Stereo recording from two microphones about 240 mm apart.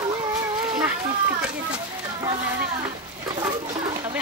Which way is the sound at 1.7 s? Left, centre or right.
Centre.